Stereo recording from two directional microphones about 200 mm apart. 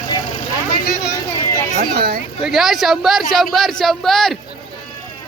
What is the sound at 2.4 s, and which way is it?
Speech, centre (ahead or behind).